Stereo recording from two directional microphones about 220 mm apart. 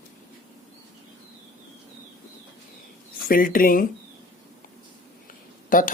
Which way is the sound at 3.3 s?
40° left (ahead or behind).